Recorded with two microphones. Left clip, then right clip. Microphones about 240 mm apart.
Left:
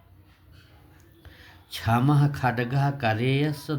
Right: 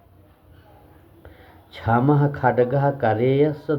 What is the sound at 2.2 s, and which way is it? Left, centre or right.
Speech, left.